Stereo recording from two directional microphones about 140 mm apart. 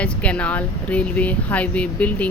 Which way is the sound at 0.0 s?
10° left (ahead or behind).